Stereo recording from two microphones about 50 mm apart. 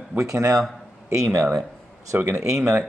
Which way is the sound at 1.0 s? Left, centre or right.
Right.